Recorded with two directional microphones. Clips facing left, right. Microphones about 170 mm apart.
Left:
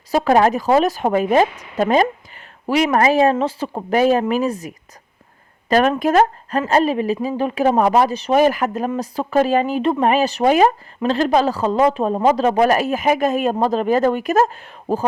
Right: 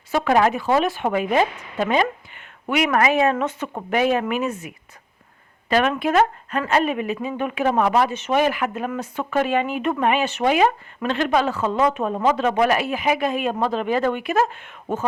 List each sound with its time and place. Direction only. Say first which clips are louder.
0.1 s speech: left 4 dB; 35° left (ahead or behind)